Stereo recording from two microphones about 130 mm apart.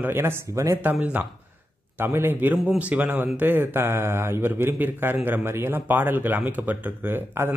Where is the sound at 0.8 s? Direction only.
10° right (ahead or behind).